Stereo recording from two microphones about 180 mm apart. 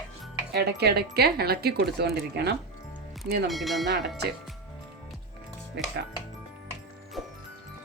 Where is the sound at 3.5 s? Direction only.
Centre (ahead or behind).